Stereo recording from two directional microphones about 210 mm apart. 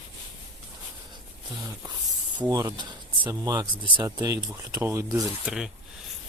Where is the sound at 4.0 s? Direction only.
15° right (ahead or behind).